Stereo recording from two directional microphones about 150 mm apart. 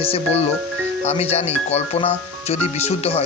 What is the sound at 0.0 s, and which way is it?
Speech, 40° left (ahead or behind).